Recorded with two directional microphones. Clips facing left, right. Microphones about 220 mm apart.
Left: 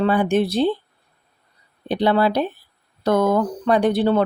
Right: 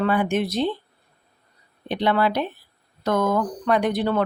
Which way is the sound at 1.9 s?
35° left (ahead or behind).